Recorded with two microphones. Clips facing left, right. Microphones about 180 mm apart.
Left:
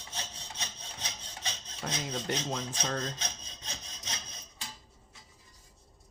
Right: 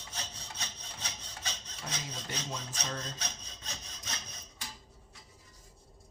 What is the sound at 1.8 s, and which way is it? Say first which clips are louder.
Filing: left 7 dB; 70° left (ahead or behind).